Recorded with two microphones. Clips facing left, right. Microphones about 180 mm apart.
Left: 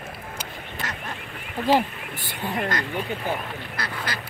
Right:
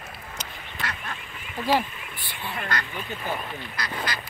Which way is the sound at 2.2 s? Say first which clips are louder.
Left 6 dB; 40° left (ahead or behind).